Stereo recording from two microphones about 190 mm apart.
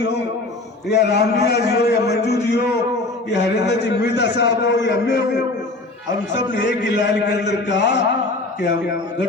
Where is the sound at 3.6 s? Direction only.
65° left (ahead or behind).